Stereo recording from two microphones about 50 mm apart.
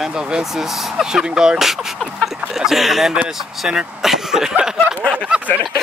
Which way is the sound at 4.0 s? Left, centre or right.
Centre.